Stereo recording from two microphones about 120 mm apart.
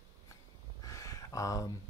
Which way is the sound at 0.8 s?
30° left (ahead or behind).